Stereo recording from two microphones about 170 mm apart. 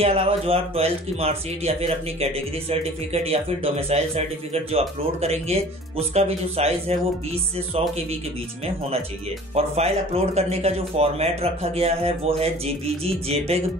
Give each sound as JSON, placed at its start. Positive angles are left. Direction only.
{"t": 0.0, "sound": "speech", "side_deg": -35}
{"t": 9.6, "sound": "speech", "side_deg": -35}